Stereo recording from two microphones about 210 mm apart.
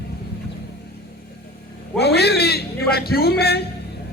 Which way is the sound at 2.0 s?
50° left (ahead or behind).